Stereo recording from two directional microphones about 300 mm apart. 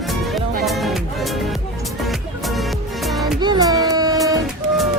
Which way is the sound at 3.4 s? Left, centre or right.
Centre.